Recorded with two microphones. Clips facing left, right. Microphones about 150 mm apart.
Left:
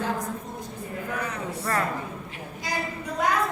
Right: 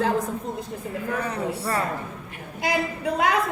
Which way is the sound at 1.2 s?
30° right (ahead or behind).